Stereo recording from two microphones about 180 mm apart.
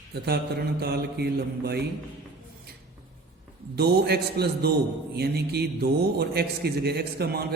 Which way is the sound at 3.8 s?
65° right (ahead or behind).